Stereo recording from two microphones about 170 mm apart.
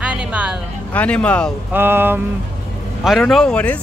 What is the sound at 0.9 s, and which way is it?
Speech, 5° left (ahead or behind).